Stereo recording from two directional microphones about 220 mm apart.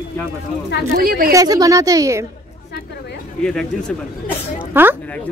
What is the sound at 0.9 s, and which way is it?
Speech, 40° right (ahead or behind).